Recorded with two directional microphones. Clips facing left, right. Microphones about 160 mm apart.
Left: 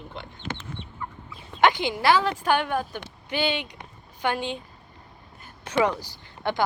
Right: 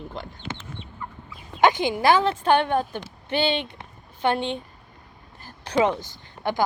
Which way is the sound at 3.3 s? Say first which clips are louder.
Right 3 dB; 15° left (ahead or behind).